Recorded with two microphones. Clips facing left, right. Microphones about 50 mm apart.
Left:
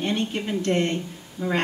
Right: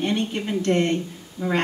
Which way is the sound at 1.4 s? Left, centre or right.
Left.